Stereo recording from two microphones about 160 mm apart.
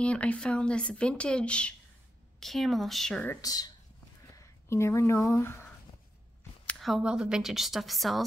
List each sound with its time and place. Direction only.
0.0 s a woman's voice: 10° left (ahead or behind)
3.3 s speech: 25° left (ahead or behind)
6.6 s a woman's voice: 5° left (ahead or behind)